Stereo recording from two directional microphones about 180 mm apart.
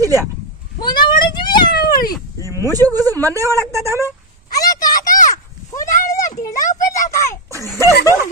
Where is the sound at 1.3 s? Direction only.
25° left (ahead or behind).